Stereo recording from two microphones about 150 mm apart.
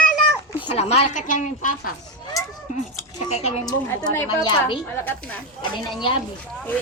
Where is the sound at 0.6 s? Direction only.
45° left (ahead or behind); by 1.9 s 60° left (ahead or behind).